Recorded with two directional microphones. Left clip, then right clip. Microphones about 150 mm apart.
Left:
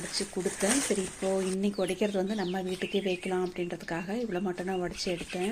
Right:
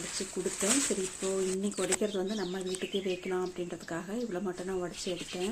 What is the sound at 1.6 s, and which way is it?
Speech, 15° left (ahead or behind).